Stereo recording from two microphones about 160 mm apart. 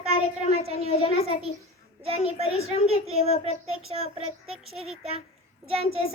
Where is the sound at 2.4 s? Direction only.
40° left (ahead or behind).